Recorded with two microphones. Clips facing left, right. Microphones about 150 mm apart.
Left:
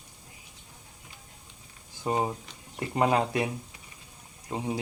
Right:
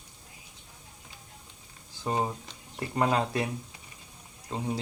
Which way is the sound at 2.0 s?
20° left (ahead or behind).